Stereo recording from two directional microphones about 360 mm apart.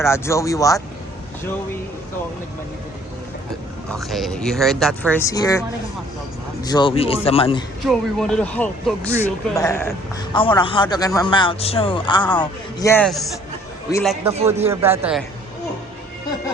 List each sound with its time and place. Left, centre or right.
0.0 s a man's voice: centre
3.9 s a man's voice: centre
7.9 s a man's voice: centre
14.3 s speech: centre
14.6 s speech: centre